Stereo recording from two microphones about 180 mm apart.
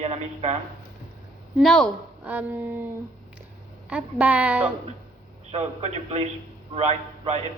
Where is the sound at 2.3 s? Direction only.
10° right (ahead or behind).